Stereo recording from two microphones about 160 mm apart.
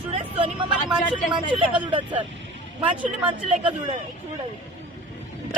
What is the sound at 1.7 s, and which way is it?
Speech, 30° right (ahead or behind).